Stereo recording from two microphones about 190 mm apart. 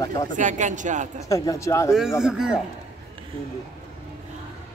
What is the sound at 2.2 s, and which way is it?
Speech, 5° right (ahead or behind).